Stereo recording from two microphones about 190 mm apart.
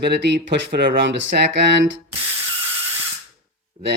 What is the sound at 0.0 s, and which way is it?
Speech, 65° right (ahead or behind).